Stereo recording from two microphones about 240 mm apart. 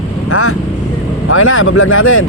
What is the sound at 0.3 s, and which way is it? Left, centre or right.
Vehicle, left.